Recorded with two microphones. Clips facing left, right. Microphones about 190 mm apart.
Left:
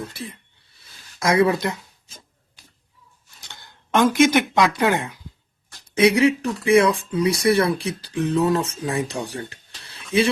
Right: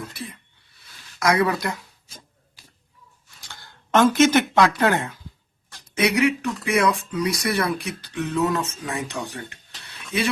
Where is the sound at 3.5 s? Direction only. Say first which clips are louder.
Right 1 dB; 15° left (ahead or behind).